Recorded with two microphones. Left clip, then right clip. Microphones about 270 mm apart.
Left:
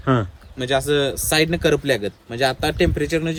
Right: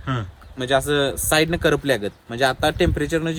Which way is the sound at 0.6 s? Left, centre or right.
Centre.